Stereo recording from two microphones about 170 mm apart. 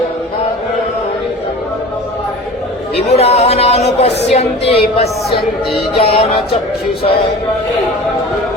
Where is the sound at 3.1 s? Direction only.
40° left (ahead or behind).